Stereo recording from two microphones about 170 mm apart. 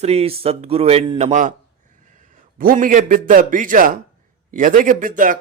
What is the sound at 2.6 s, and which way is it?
Speech, 55° right (ahead or behind).